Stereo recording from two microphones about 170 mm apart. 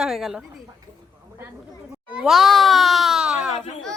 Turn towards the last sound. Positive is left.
turn(degrees=-5)  # may be behind; listen again after turning